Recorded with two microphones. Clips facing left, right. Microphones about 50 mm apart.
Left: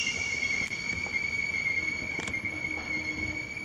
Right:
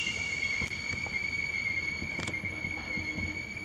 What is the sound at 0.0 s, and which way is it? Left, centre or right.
Train wheels squealing, centre.